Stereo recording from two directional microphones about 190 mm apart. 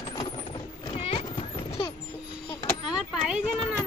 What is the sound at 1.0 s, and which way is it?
Clip-clop, 35° left (ahead or behind).